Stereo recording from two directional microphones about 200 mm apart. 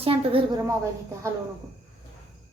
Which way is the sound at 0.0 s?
25° right (ahead or behind).